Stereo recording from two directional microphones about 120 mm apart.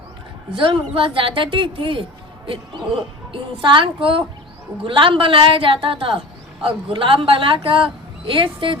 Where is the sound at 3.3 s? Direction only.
40° right (ahead or behind).